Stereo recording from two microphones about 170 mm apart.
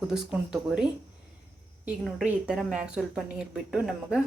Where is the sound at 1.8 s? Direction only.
5° right (ahead or behind).